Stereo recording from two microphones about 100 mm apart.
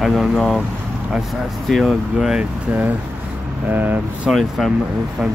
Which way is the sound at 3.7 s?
20° right (ahead or behind).